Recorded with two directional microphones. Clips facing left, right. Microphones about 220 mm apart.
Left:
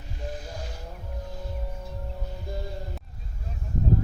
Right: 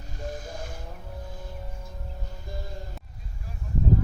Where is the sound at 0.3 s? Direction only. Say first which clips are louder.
Right 1 dB; 50° right (ahead or behind).